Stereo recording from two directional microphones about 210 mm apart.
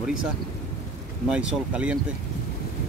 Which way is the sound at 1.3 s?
5° right (ahead or behind).